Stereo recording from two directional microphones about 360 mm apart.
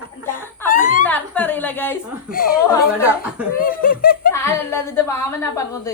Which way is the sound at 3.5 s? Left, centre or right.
Left.